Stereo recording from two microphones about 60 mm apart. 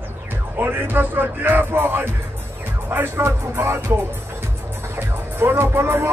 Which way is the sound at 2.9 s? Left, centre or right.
Right.